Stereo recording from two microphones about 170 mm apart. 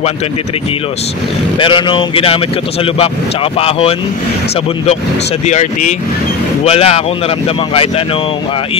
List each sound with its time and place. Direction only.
1.6 s speech: 30° left (ahead or behind)
5.4 s speech: 45° left (ahead or behind)